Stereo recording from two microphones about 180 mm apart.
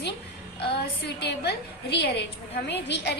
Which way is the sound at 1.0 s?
70° left (ahead or behind).